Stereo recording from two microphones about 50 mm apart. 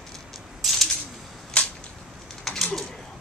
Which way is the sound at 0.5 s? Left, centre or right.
Centre.